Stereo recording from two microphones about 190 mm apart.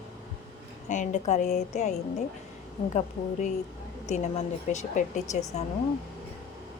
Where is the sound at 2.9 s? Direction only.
40° left (ahead or behind).